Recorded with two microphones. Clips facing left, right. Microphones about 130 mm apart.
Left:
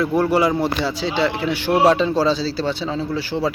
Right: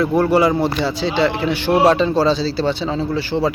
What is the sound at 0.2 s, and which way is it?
Speech, 5° left (ahead or behind).